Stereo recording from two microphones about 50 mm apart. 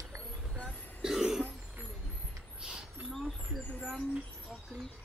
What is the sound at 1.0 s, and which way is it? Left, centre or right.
Cough, centre.